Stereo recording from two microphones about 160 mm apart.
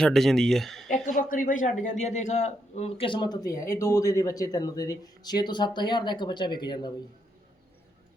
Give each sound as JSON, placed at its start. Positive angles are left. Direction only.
{"t": 0.0, "sound": "speech", "side_deg": 0}
{"t": 1.0, "sound": "a man's voice", "side_deg": 60}